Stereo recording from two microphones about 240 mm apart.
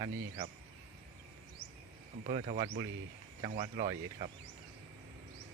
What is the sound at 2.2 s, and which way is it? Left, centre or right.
Speech, right.